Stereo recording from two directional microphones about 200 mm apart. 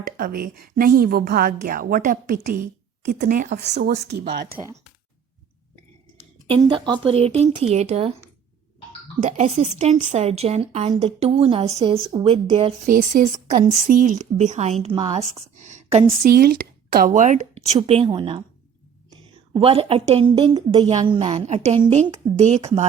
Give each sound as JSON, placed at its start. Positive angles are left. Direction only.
{"t": 0.2, "sound": "a woman's voice", "side_deg": -50}
{"t": 6.5, "sound": "a woman's voice", "side_deg": -25}
{"t": 9.2, "sound": "a woman's voice", "side_deg": -35}
{"t": 12.9, "sound": "a woman's voice", "side_deg": -40}
{"t": 16.3, "sound": "a woman's voice", "side_deg": -45}
{"t": 19.5, "sound": "a woman's voice", "side_deg": -30}